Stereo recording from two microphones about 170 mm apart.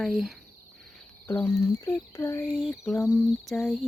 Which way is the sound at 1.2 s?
15° left (ahead or behind).